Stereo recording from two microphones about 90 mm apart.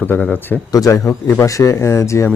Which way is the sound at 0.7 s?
40° left (ahead or behind).